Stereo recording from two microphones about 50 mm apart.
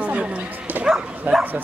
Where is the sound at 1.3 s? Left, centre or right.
Right.